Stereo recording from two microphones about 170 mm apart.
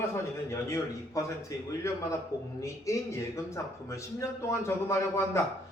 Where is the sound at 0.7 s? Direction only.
20° left (ahead or behind).